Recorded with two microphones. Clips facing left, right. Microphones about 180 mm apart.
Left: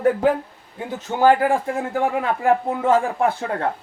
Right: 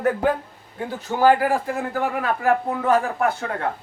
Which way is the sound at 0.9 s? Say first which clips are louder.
Left 1 dB; 20° left (ahead or behind).